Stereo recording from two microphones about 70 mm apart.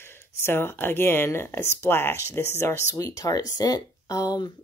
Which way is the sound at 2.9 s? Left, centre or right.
Left.